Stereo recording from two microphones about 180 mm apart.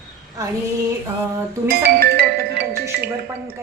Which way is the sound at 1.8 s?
60° right (ahead or behind).